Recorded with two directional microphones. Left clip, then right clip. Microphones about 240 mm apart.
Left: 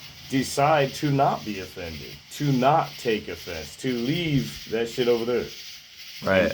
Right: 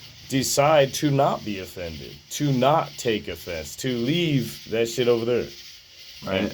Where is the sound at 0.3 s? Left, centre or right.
Right.